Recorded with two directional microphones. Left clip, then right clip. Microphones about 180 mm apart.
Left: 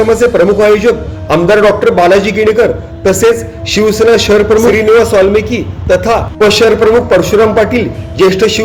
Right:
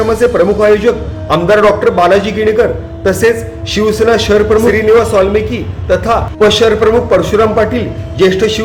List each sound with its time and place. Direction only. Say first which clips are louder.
0.1 s a man's voice: left 2 dB; 20° left (ahead or behind)